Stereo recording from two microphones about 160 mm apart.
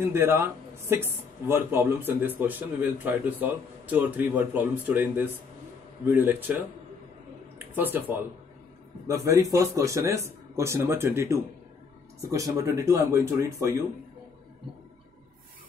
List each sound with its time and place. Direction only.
0.0 s speech: 15° right (ahead or behind)
7.7 s speech: 10° right (ahead or behind)